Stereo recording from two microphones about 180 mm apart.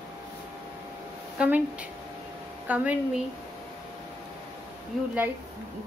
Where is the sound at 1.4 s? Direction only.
5° right (ahead or behind).